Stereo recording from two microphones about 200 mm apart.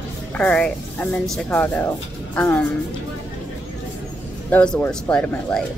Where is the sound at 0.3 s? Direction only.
5° left (ahead or behind).